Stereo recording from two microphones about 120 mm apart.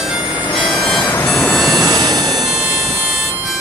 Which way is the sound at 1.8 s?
30° right (ahead or behind).